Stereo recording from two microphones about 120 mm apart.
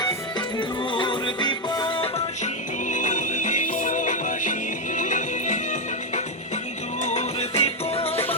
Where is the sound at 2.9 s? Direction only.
90° left.